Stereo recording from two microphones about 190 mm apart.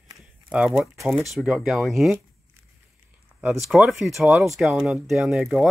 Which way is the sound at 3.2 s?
5° right (ahead or behind).